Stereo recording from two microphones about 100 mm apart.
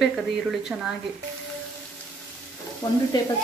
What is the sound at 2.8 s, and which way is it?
Frying, 40° left (ahead or behind).